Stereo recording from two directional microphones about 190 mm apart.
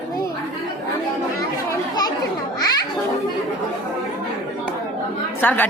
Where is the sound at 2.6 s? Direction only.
20° left (ahead or behind).